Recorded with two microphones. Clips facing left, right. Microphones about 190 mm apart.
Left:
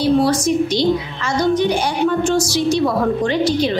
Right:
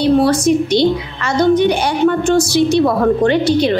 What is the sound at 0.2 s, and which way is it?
A woman's voice, 60° right (ahead or behind).